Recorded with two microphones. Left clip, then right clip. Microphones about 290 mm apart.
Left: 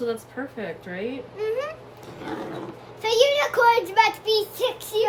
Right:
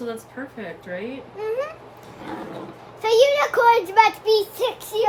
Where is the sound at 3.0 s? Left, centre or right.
Centre.